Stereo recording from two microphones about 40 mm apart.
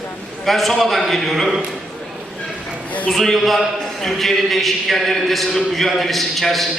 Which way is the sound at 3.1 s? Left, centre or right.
Centre.